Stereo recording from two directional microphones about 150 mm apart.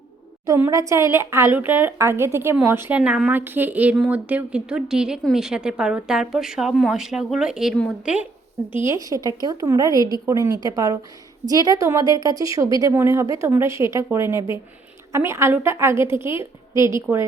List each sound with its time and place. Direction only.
0.4 s a woman's voice: 20° right (ahead or behind)
8.9 s a woman's voice: 25° right (ahead or behind)